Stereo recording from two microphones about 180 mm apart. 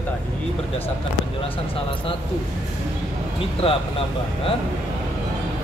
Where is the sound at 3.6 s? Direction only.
30° left (ahead or behind).